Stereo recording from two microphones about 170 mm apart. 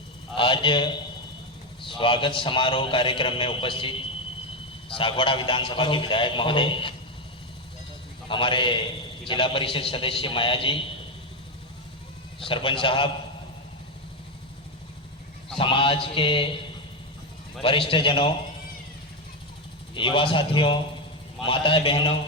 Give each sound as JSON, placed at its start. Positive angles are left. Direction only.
{"t": 0.3, "sound": "a man's voice", "side_deg": 30}
{"t": 4.9, "sound": "a man's voice", "side_deg": 30}
{"t": 8.3, "sound": "a man's voice", "side_deg": 30}
{"t": 12.4, "sound": "a man's voice", "side_deg": 30}
{"t": 15.5, "sound": "a man's voice", "side_deg": 30}
{"t": 17.6, "sound": "a man's voice", "side_deg": 30}
{"t": 19.9, "sound": "a man's voice", "side_deg": 30}